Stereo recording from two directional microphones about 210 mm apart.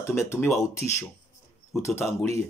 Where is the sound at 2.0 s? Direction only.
10° left (ahead or behind).